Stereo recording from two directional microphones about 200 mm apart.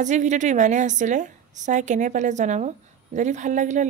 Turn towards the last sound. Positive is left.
turn(degrees=-40)  # may be behind; listen again after turning